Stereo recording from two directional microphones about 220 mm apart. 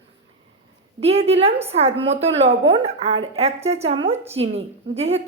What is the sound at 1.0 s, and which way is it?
A woman's voice, 25° right (ahead or behind).